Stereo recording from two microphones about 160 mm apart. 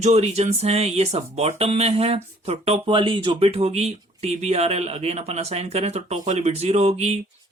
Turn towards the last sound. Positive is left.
turn(degrees=-45)  # may be behind; listen again after turning